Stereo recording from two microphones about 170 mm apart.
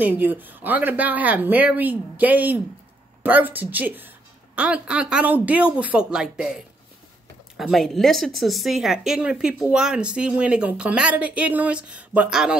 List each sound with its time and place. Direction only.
0.2 s speech: 10° right (ahead or behind)